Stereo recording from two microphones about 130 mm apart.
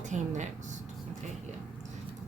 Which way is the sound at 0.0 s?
70° right (ahead or behind).